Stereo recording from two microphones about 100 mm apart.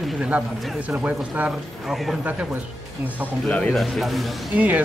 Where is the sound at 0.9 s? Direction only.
15° right (ahead or behind).